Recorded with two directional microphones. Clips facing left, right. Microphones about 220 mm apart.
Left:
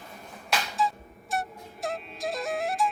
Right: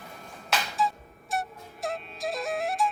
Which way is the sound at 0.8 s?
Centre (ahead or behind).